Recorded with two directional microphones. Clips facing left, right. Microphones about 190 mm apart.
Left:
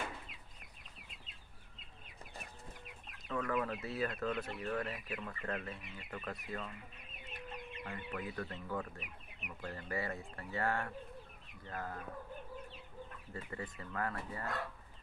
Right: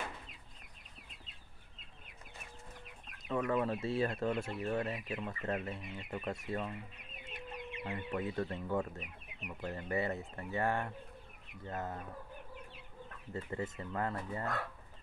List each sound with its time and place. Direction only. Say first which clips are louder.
3.3 s speech: right 4 dB; 20° right (ahead or behind)
7.8 s speech: right 6 dB; 25° right (ahead or behind)
13.3 s speech: right 6 dB; 25° right (ahead or behind)